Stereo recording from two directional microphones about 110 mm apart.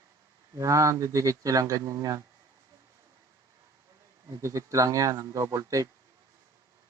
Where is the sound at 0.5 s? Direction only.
30° right (ahead or behind).